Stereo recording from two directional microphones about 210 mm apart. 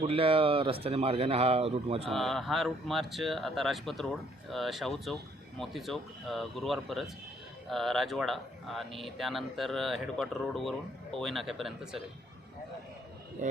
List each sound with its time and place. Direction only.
0.1 s speech: 25° right (ahead or behind)
2.0 s speech: centre (ahead or behind)
13.4 s speech: 35° right (ahead or behind)